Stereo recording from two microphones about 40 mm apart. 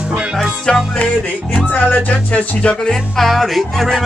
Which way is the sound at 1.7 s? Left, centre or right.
Left.